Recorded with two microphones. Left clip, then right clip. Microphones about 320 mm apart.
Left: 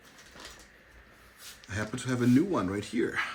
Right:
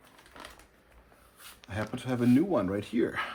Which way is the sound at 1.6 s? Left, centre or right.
Centre.